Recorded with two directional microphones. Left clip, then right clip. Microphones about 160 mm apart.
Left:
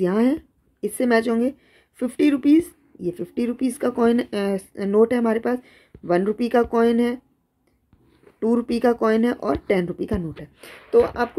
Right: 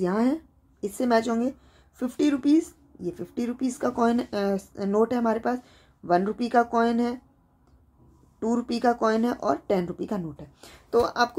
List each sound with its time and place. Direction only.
0.0 s speech: 20° left (ahead or behind)
8.4 s speech: 20° left (ahead or behind)